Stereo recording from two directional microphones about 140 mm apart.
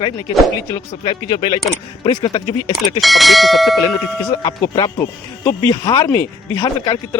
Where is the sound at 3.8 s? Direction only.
25° left (ahead or behind).